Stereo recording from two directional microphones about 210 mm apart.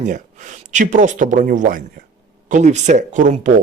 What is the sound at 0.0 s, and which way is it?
Speech, 35° right (ahead or behind).